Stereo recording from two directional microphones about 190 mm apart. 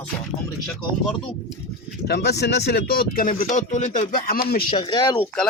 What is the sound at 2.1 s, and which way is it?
Speech, 60° left (ahead or behind).